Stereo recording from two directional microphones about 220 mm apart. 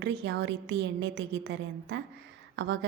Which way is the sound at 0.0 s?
50° right (ahead or behind).